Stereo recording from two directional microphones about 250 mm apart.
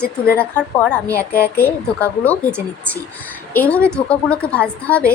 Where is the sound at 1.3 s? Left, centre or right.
Left.